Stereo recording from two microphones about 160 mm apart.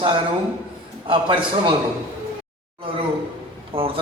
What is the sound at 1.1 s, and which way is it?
Speech, 30° right (ahead or behind).